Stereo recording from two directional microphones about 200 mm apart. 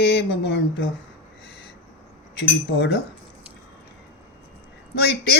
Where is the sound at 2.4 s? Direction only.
60° left (ahead or behind).